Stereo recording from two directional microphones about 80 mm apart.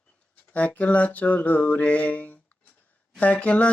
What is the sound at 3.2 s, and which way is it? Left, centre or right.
Mantra, centre.